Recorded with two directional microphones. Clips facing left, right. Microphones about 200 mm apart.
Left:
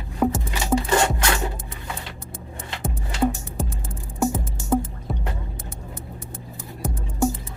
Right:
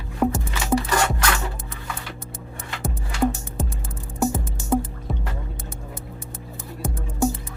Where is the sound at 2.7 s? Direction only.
20° left (ahead or behind).